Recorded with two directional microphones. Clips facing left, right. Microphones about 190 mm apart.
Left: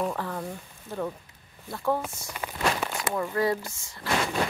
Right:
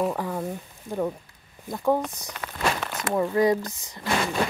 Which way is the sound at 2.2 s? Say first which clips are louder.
Right 1 dB; 10° left (ahead or behind).